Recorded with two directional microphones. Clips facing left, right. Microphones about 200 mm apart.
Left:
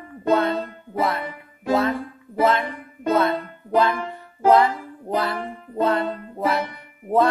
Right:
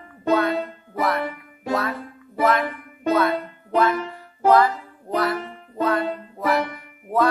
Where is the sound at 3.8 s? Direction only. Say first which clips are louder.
Even; 25° left (ahead or behind).